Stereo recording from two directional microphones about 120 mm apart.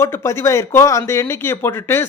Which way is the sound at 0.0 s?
20° left (ahead or behind).